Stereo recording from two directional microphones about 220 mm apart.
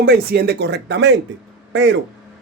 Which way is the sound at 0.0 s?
45° right (ahead or behind).